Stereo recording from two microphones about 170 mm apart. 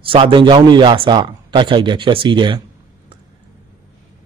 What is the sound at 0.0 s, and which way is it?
A man's voice, 30° right (ahead or behind).